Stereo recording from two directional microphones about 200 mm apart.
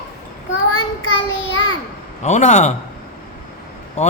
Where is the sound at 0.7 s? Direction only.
80° left.